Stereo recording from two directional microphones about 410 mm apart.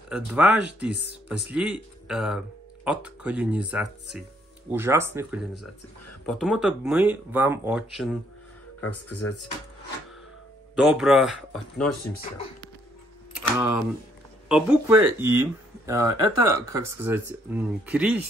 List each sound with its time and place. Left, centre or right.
0.1 s speech: centre
9.2 s speech: left
10.8 s speech: centre
13.4 s speech: centre